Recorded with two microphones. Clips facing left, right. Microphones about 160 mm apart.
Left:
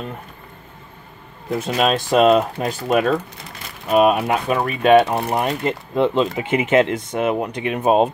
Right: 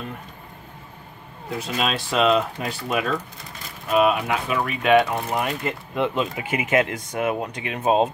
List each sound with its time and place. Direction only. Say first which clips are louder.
1.6 s speech: left 6 dB; 45° left (ahead or behind); by 8.1 s 20° left (ahead or behind)